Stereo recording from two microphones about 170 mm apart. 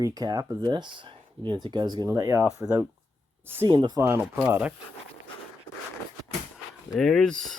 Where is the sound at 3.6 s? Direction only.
25° right (ahead or behind).